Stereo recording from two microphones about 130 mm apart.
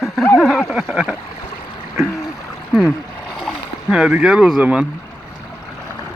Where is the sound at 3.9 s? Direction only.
5° right (ahead or behind).